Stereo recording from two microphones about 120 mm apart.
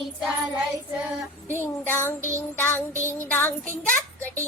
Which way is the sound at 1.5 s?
20° left (ahead or behind).